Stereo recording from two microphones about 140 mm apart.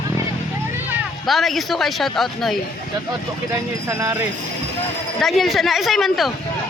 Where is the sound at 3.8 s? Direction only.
20° right (ahead or behind).